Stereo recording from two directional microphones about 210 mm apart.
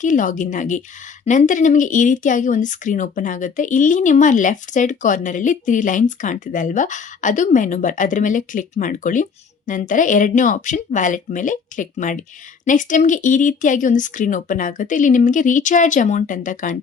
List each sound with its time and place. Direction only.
0.0 s speech: 40° left (ahead or behind)